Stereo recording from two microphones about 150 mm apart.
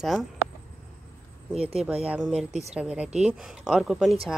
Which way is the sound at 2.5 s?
45° right (ahead or behind).